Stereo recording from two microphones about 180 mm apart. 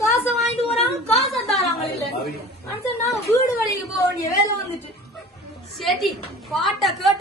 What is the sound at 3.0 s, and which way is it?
Speech, 15° left (ahead or behind).